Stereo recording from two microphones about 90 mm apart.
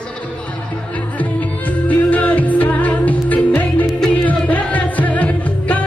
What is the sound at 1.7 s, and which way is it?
Music, 15° left (ahead or behind).